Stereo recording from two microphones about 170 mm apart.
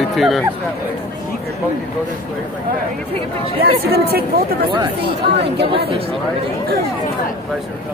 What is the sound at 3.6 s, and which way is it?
Speech, 65° right (ahead or behind).